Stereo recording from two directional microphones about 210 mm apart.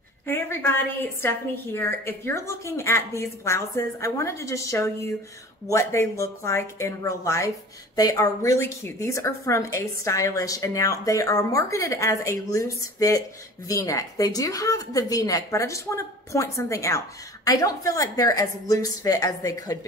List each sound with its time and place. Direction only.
0.3 s a woman's voice: 10° left (ahead or behind)